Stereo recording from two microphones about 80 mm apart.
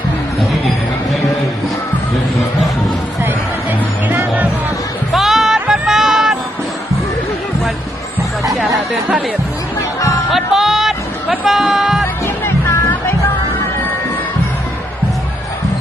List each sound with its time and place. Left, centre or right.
3.2 s music: right
5.1 s music: centre
10.3 s music: centre
12.2 s music: left